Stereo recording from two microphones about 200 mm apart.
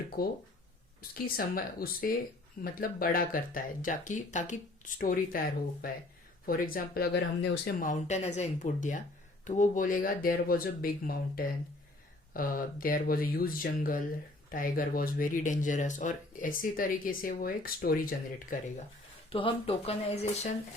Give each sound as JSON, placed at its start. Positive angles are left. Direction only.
{"t": 0.2, "sound": "speech", "side_deg": 50}
{"t": 19.3, "sound": "speech", "side_deg": 25}